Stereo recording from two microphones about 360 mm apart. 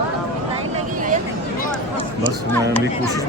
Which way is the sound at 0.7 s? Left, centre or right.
Right.